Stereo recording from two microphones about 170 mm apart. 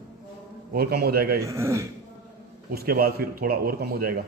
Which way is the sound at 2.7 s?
60° right (ahead or behind).